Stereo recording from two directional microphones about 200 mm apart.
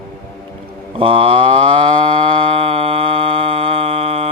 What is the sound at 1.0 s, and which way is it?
Moo, 25° right (ahead or behind).